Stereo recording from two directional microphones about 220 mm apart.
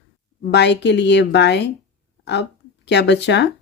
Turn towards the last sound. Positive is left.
turn(degrees=50)  # may be behind; listen again after turning